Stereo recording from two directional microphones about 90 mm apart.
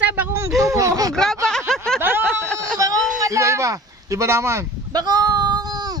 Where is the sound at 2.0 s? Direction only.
25° right (ahead or behind).